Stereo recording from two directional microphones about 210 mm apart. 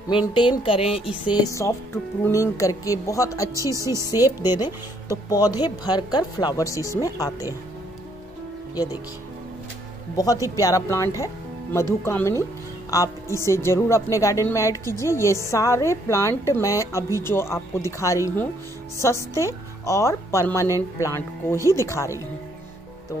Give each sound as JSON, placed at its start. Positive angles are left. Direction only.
{"t": 0.3, "sound": "a woman's voice", "side_deg": 25}
{"t": 3.7, "sound": "speech", "side_deg": -15}
{"t": 5.1, "sound": "a woman's voice", "side_deg": 20}
{"t": 10.1, "sound": "a woman's voice", "side_deg": 15}